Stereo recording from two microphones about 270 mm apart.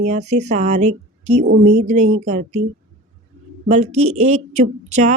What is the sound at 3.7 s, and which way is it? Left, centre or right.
Speech, right.